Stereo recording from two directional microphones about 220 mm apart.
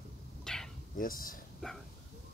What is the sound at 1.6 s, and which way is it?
Speech, 5° left (ahead or behind).